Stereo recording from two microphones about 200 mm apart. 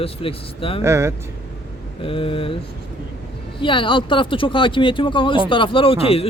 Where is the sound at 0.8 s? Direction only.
15° right (ahead or behind).